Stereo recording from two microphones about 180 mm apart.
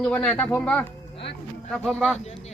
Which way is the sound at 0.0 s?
5° left (ahead or behind).